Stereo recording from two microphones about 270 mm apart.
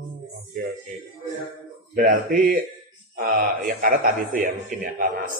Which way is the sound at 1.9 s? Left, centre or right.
Right.